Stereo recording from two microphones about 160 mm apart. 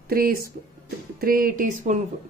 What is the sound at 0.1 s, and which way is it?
Speech, 70° right (ahead or behind).